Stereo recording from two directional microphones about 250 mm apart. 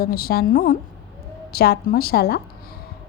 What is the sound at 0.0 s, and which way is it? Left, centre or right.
A woman's voice, left.